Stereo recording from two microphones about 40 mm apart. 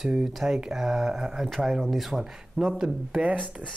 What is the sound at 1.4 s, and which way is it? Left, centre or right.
Speech, centre.